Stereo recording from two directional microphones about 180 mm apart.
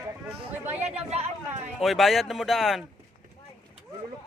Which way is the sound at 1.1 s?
35° right (ahead or behind).